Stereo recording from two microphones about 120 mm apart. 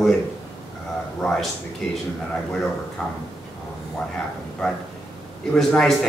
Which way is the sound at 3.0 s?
5° left (ahead or behind).